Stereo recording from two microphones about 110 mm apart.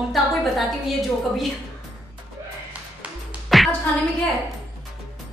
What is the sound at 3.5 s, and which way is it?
Music, centre (ahead or behind).